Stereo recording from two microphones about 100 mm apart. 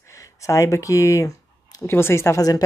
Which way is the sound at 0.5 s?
30° left (ahead or behind).